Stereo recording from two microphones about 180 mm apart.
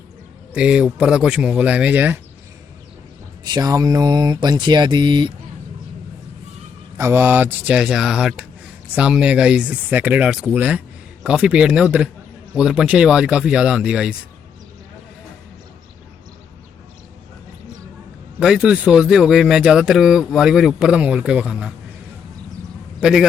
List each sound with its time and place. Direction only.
0.5 s a man's voice: 5° right (ahead or behind)
3.4 s speech: 20° right (ahead or behind)
6.9 s a man's voice: 10° right (ahead or behind)
18.3 s a man's voice: 5° right (ahead or behind)
23.0 s a man's voice: 5° right (ahead or behind)